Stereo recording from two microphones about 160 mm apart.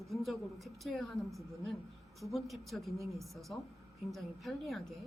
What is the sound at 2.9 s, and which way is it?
Speech, 20° right (ahead or behind).